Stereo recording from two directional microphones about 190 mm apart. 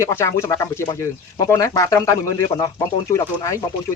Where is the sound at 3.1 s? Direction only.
15° left (ahead or behind).